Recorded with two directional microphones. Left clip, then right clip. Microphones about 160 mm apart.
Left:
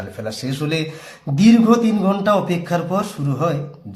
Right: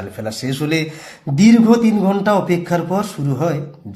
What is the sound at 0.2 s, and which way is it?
A man's voice, 20° right (ahead or behind).